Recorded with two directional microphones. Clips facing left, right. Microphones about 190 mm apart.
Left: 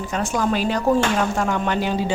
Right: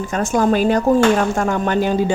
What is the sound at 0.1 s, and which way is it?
Speech, 45° right (ahead or behind).